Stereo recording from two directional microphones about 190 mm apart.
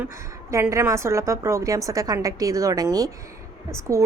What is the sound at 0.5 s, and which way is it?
A woman's voice, 15° right (ahead or behind).